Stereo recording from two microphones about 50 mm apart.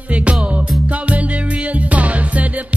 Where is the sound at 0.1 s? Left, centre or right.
Right.